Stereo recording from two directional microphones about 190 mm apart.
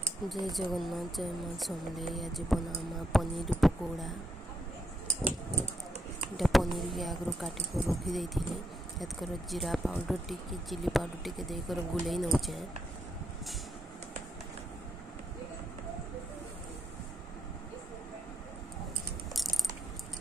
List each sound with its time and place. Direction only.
0.3 s speech: centre (ahead or behind)
6.3 s speech: centre (ahead or behind)